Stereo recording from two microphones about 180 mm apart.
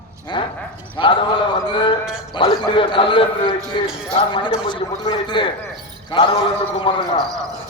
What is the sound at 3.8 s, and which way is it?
Speech, 5° right (ahead or behind).